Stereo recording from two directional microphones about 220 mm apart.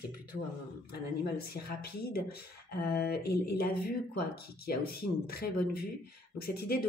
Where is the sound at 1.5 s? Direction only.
45° left (ahead or behind).